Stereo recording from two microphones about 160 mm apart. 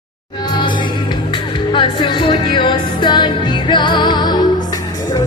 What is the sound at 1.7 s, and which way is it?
Music, 30° left (ahead or behind).